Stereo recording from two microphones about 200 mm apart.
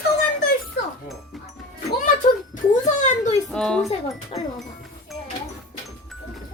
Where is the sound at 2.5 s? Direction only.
35° left (ahead or behind).